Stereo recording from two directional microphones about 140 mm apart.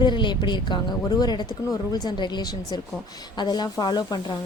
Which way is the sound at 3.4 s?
30° left (ahead or behind).